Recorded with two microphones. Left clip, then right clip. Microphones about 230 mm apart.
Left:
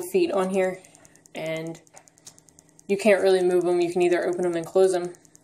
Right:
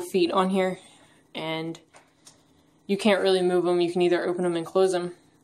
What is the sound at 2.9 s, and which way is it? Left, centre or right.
Speech, centre.